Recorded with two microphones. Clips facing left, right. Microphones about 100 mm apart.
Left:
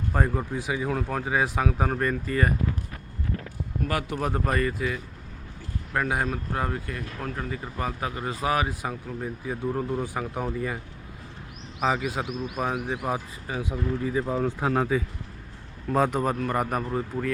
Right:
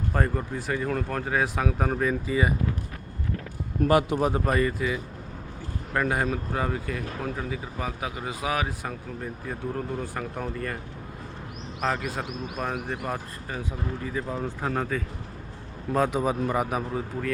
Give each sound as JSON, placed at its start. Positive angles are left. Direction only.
{"t": 0.1, "sound": "speech", "side_deg": 5}
{"t": 3.8, "sound": "speech", "side_deg": -20}
{"t": 4.3, "sound": "speech", "side_deg": -5}
{"t": 11.8, "sound": "speech", "side_deg": 5}
{"t": 15.9, "sound": "a man's voice", "side_deg": 0}